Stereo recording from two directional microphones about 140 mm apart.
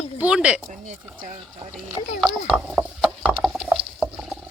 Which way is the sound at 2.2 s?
5° right (ahead or behind).